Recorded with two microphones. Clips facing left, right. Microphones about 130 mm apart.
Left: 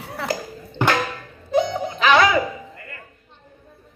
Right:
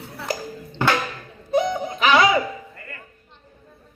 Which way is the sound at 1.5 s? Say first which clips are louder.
Left 1 dB; 25° left (ahead or behind).